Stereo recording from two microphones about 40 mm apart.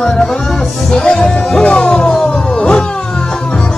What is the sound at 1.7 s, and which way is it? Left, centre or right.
Music, left.